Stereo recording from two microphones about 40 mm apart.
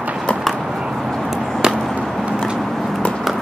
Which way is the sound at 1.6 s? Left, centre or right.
Centre.